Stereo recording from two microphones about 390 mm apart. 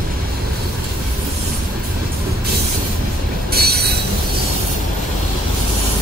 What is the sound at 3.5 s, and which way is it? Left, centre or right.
Train wheels squealing, right.